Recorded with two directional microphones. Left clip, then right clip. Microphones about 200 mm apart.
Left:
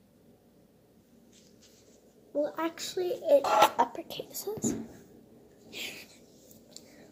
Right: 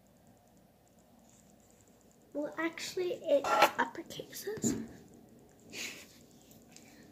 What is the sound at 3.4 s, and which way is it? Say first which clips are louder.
Speech: left 1 dB; 20° left (ahead or behind).